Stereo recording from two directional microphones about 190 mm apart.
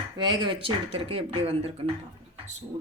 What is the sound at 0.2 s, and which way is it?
Speech, 25° right (ahead or behind).